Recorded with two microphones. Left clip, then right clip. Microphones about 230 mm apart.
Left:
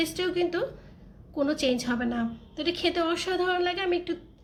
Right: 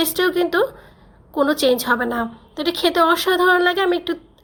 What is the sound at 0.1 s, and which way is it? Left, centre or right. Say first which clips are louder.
Speech: right 9 dB; right.